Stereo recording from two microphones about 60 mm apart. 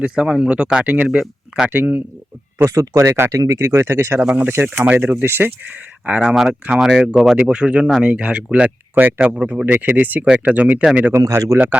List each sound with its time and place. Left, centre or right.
0.0 s speech: centre
1.7 s speech: right
2.6 s speech: right
3.3 s speech: right
4.6 s speech: right
5.1 s speech: right
6.2 s speech: centre
9.0 s speech: right
9.2 s speech: centre
11.2 s speech: right
11.5 s speech: right